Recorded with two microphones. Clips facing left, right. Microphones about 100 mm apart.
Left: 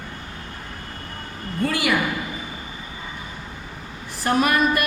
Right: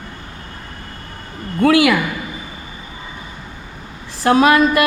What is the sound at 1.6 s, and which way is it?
Speech, 80° right.